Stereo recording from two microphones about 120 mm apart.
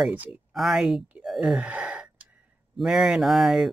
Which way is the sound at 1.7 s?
10° right (ahead or behind).